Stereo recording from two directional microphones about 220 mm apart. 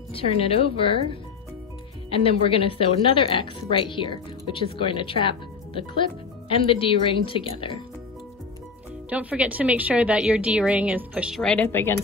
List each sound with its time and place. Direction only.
0.1 s speech: 25° left (ahead or behind)
2.0 s speech: 25° left (ahead or behind)
9.1 s a woman's voice: 5° right (ahead or behind); by 11.9 s 10° left (ahead or behind)